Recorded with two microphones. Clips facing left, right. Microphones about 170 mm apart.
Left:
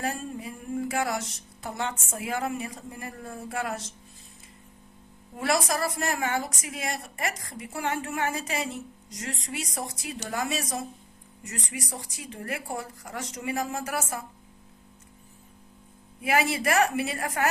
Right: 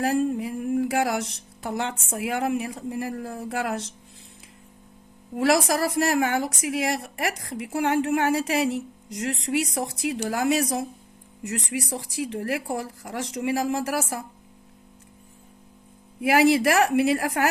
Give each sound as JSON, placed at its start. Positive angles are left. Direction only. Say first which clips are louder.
{"t": 0.0, "sound": "a woman's voice", "louder": "right 9 dB", "side_deg": -70}
{"t": 5.4, "sound": "a woman's voice", "louder": "right 5 dB", "side_deg": -85}
{"t": 16.2, "sound": "a woman's voice", "louder": "right 7 dB", "side_deg": -70}